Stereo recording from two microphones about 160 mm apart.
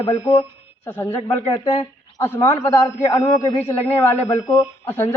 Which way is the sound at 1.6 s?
20° left (ahead or behind).